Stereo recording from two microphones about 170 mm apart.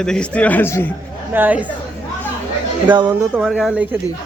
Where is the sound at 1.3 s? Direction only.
10° right (ahead or behind).